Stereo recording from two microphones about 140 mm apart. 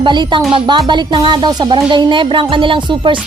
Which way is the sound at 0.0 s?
35° right (ahead or behind).